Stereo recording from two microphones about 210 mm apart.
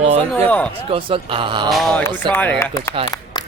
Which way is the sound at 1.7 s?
Centre (ahead or behind).